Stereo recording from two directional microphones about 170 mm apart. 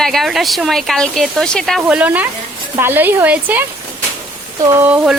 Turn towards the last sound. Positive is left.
turn(degrees=-5)  # may be behind; listen again after turning